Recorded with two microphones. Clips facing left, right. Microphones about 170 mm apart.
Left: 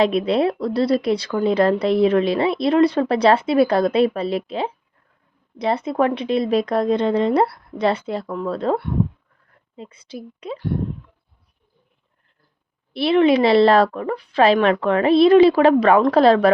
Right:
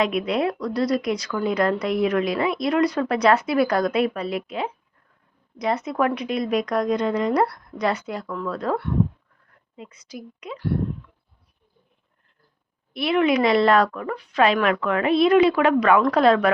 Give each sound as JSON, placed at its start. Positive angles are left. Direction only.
{"t": 0.0, "sound": "a woman's voice", "side_deg": 30}
{"t": 12.9, "sound": "a woman's voice", "side_deg": 30}